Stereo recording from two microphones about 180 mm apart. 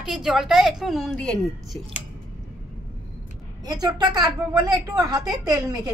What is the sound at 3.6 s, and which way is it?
A woman's voice, 20° right (ahead or behind).